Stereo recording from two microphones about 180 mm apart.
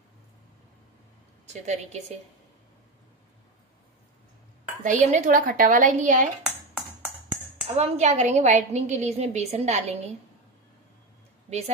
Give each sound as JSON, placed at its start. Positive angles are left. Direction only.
{"t": 1.4, "sound": "a woman's voice", "side_deg": -40}
{"t": 4.8, "sound": "a woman's voice", "side_deg": -45}
{"t": 7.6, "sound": "a woman's voice", "side_deg": -35}